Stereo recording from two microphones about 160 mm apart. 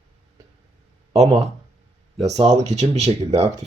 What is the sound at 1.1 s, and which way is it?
Speech, 40° right (ahead or behind).